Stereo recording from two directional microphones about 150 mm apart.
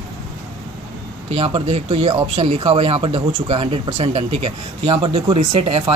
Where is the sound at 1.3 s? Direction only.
45° right (ahead or behind).